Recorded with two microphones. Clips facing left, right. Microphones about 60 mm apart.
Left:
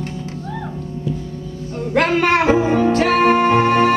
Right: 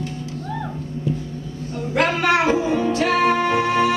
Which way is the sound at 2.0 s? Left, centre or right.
Left.